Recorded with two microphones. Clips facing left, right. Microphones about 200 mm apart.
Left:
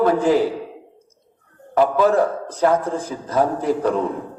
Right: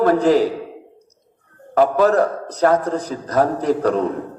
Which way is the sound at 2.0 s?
40° right (ahead or behind).